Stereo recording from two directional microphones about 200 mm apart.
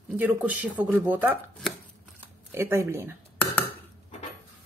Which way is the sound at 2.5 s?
10° right (ahead or behind).